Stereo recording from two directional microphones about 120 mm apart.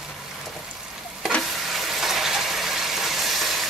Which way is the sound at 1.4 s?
Centre (ahead or behind).